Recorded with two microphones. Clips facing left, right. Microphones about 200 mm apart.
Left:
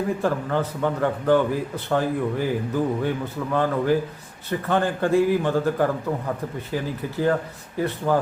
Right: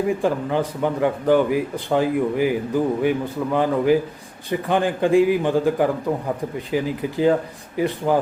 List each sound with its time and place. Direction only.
0.1 s a man's voice: 15° right (ahead or behind)